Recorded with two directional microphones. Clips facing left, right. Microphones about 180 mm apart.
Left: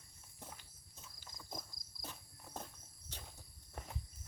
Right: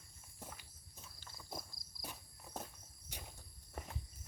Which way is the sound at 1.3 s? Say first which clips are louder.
Right 1 dB; 10° right (ahead or behind).